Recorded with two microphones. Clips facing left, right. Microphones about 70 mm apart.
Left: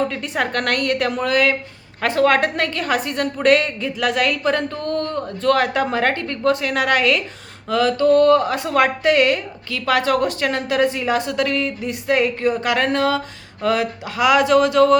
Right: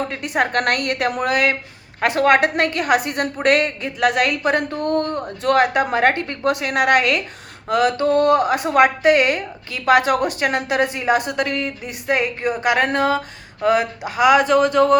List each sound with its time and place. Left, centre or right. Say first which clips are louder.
0.2 s speech: right 2 dB; centre
4.7 s speech: right 2 dB; right
6.6 s speech: right 2 dB; centre